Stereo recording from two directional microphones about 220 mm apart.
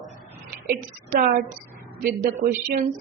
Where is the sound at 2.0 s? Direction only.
40° right (ahead or behind).